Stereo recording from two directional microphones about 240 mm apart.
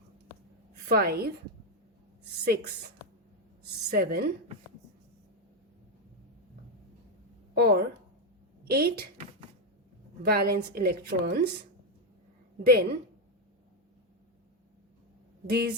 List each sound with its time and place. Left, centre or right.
0.7 s a woman's voice: right
3.8 s a woman's voice: right
7.5 s a woman's voice: right
10.2 s a woman's voice: right
12.6 s a woman's voice: right
15.4 s speech: right